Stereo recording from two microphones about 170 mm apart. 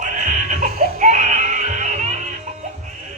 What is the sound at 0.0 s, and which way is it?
Music, 50° right (ahead or behind).